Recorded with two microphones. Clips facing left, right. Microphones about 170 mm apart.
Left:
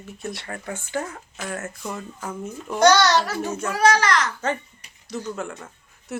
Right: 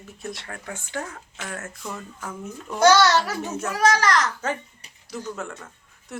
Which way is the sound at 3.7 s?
40° right (ahead or behind).